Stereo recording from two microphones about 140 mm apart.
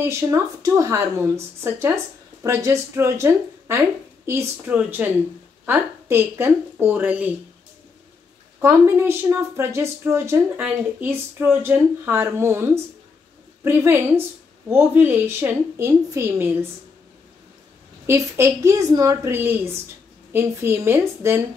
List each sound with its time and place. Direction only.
0.0 s a woman's voice: 20° right (ahead or behind)
8.5 s a woman's voice: 20° right (ahead or behind)
18.0 s a woman's voice: 20° right (ahead or behind)